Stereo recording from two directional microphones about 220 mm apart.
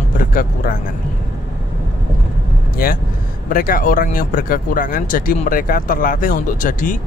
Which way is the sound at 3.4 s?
40° left (ahead or behind).